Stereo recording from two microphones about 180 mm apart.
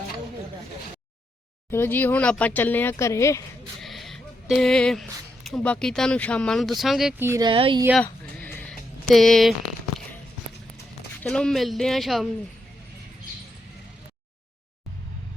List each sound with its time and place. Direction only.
1.7 s speech: 10° left (ahead or behind)
3.8 s speech: centre (ahead or behind)
7.2 s speech: 15° right (ahead or behind)
7.4 s speech: 30° right (ahead or behind)
7.9 s a sound: 10° left (ahead or behind)
11.2 s speech: 5° left (ahead or behind)